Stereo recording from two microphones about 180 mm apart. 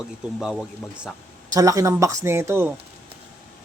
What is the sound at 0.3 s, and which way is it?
Speech, centre (ahead or behind).